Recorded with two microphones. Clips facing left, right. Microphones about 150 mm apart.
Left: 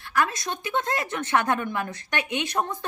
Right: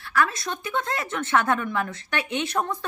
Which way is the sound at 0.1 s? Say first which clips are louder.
Right 1 dB; 20° left (ahead or behind).